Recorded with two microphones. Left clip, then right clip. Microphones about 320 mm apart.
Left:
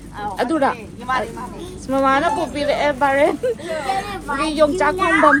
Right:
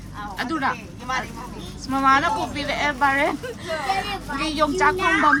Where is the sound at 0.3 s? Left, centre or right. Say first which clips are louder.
Left 6 dB; centre.